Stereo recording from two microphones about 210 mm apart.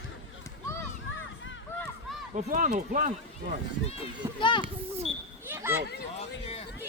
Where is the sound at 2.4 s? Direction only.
35° right (ahead or behind).